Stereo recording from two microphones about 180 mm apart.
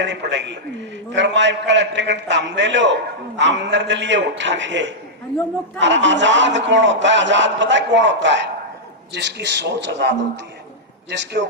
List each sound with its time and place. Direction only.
0.0 s a man's voice: 80° right